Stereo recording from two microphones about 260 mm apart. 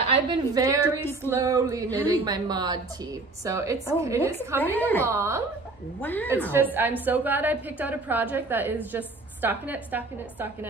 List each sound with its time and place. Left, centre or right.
0.0 s a woman's voice: centre
2.0 s a woman's voice: centre
2.2 s a woman's voice: centre
4.7 s a woman's voice: centre
5.0 s a woman's voice: centre
5.9 s a woman's voice: centre
6.5 s a woman's voice: centre